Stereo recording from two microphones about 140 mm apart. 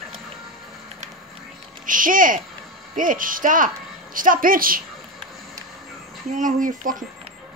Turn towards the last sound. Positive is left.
turn(degrees=-70)  # may be behind; listen again after turning